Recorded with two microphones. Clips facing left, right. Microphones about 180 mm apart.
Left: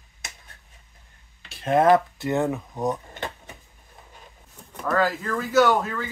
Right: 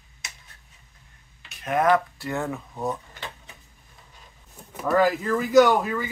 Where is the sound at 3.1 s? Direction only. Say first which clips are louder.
Left 6 dB; 50° left (ahead or behind).